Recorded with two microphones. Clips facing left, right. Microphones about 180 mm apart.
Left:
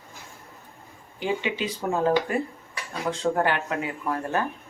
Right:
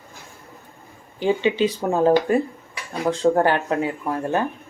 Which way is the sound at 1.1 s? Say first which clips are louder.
Right 8 dB; 30° right (ahead or behind).